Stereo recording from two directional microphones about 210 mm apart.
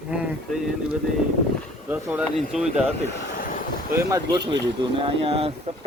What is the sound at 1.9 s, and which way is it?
Speech, 5° right (ahead or behind).